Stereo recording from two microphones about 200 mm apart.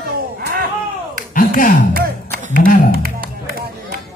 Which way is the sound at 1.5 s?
40° left (ahead or behind).